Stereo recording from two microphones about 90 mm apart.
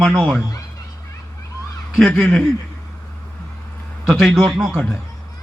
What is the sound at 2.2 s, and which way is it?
Speech, 5° left (ahead or behind).